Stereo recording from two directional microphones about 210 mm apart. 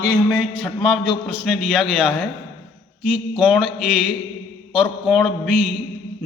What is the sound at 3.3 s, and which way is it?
Speech, 5° right (ahead or behind).